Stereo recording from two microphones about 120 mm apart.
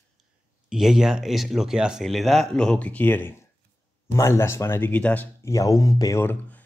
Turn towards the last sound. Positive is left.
turn(degrees=20)  # may be behind; listen again after turning